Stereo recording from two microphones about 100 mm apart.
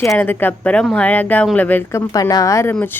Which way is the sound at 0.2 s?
20° left (ahead or behind).